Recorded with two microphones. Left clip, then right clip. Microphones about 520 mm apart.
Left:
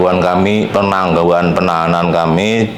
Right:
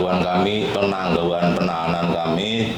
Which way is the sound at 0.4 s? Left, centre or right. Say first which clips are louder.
Left 7 dB; left.